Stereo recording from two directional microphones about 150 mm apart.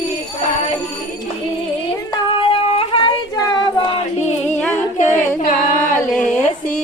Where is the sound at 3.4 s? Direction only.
25° left (ahead or behind).